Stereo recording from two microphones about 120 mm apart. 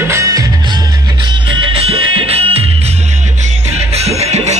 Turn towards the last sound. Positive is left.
turn(degrees=-65)  # may be behind; listen again after turning